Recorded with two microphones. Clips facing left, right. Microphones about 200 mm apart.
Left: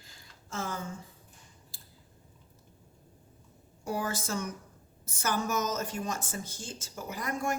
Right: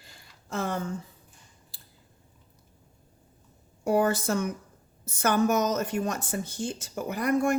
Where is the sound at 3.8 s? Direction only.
60° right (ahead or behind).